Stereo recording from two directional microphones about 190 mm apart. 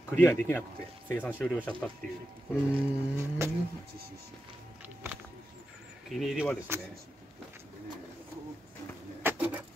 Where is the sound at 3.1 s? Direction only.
15° right (ahead or behind).